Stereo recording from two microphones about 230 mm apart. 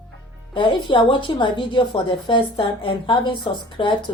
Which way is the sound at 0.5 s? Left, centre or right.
Left.